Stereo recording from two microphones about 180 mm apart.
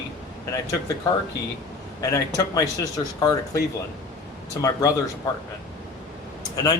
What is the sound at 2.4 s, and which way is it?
Speech, 20° left (ahead or behind).